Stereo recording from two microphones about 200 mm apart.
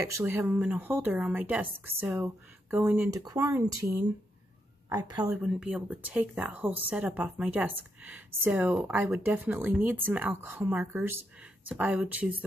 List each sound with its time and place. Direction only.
0.0 s a woman's voice: 15° right (ahead or behind)
5.3 s speech: 5° right (ahead or behind)